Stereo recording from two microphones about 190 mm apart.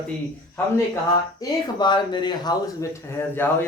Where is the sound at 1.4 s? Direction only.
25° left (ahead or behind).